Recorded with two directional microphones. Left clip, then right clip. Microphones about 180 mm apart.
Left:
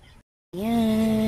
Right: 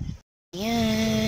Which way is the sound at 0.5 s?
15° left (ahead or behind).